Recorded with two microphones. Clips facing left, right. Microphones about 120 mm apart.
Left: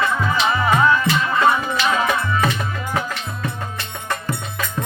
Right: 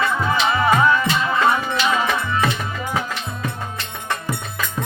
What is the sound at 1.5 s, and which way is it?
Music, 5° left (ahead or behind).